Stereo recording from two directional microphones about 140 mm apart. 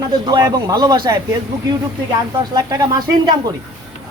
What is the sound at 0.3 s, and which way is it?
Speech, 25° right (ahead or behind).